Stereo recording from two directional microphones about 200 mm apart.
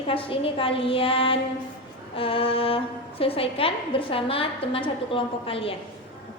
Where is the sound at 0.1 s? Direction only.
25° left (ahead or behind).